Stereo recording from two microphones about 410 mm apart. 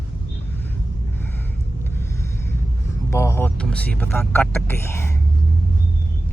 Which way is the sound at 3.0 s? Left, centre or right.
Centre.